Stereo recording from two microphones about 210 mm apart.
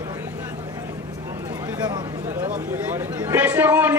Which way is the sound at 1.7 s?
20° right (ahead or behind).